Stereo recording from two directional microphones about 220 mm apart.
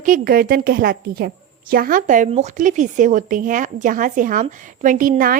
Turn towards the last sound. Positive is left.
turn(degrees=-40)  # may be behind; listen again after turning